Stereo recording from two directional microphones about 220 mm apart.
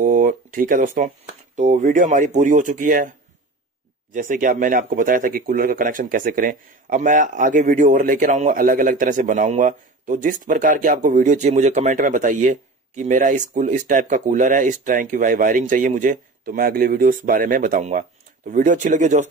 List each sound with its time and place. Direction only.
0.0 s speech: 35° right (ahead or behind)
4.1 s speech: 35° right (ahead or behind)